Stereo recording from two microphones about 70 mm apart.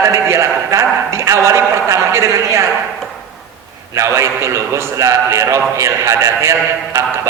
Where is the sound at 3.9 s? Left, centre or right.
Right.